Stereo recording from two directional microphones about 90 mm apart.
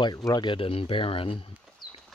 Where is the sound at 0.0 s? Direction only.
45° left (ahead or behind); by 1.5 s 90° left.